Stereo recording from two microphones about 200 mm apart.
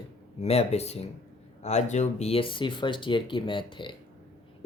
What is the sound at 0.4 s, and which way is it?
Speech, 30° left (ahead or behind).